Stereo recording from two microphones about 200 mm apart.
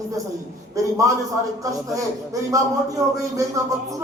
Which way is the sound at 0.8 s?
15° right (ahead or behind).